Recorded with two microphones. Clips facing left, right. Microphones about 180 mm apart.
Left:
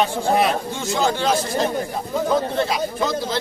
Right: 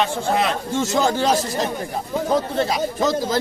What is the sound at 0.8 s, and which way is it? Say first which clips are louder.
A man's voice: right 2 dB; 40° right (ahead or behind).